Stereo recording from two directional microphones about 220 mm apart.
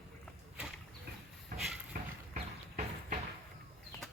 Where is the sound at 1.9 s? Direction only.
35° right (ahead or behind).